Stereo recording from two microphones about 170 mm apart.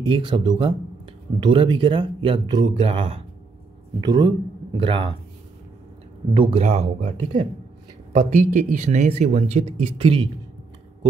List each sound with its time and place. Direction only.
0.1 s speech: 30° right (ahead or behind)
6.3 s speech: 30° right (ahead or behind)